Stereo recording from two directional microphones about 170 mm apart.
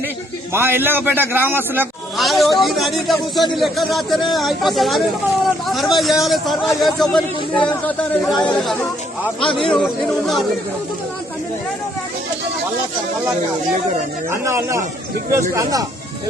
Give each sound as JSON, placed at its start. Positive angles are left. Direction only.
{"t": 0.5, "sound": "a man's voice", "side_deg": -15}
{"t": 2.1, "sound": "a man's voice", "side_deg": 0}
{"t": 9.4, "sound": "a man's voice", "side_deg": 30}
{"t": 9.7, "sound": "speech", "side_deg": 0}
{"t": 14.3, "sound": "a man's voice", "side_deg": -15}